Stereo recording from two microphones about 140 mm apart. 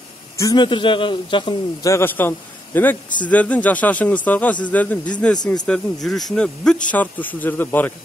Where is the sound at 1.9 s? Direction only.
15° left (ahead or behind).